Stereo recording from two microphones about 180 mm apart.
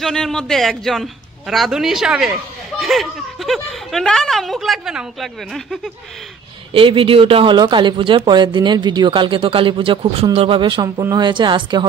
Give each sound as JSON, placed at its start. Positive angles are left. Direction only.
{"t": 0.0, "sound": "speech", "side_deg": 5}
{"t": 6.7, "sound": "speech", "side_deg": -30}